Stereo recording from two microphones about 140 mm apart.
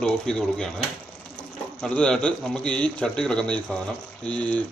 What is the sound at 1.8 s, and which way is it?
A man's voice, 5° left (ahead or behind).